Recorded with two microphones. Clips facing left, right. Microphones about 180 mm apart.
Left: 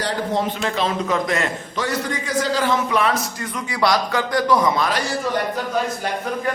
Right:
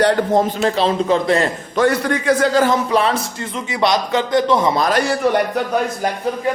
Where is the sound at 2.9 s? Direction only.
30° right (ahead or behind).